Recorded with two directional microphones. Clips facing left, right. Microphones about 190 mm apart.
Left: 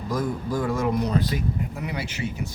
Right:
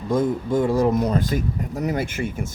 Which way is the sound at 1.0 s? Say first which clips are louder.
Right 3 dB; 50° right (ahead or behind).